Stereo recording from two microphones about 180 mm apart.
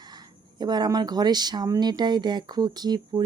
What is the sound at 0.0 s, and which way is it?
Speech, 25° right (ahead or behind).